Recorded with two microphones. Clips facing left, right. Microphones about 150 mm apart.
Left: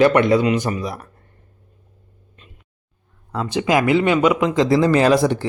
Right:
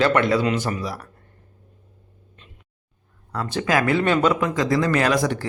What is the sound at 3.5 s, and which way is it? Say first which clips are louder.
A man's voice: left 4 dB; 20° left (ahead or behind).